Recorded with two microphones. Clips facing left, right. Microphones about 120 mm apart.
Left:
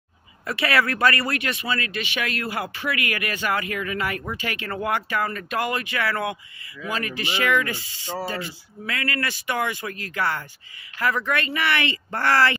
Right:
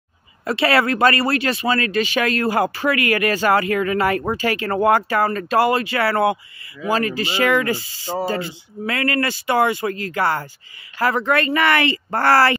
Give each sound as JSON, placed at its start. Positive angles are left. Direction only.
{"t": 0.5, "sound": "speech", "side_deg": -30}
{"t": 11.4, "sound": "speech", "side_deg": -45}